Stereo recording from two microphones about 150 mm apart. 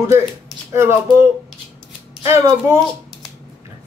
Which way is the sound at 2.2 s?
20° right (ahead or behind).